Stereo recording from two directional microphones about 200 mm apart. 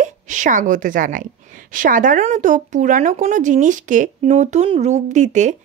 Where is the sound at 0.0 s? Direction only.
40° right (ahead or behind).